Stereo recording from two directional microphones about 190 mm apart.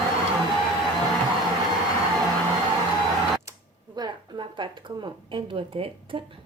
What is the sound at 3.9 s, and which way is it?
Speech, 25° right (ahead or behind).